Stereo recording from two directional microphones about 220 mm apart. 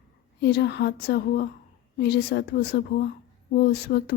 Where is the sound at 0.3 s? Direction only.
50° left (ahead or behind).